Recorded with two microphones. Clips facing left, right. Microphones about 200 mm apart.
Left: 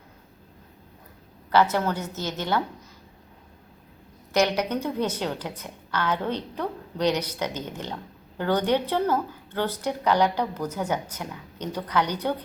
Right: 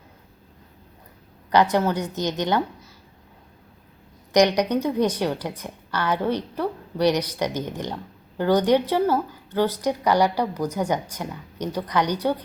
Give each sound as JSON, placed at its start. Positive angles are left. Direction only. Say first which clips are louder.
{"t": 1.5, "sound": "a woman's voice", "louder": "right 2 dB", "side_deg": -15}
{"t": 4.3, "sound": "a woman's voice", "louder": "right 5 dB", "side_deg": -15}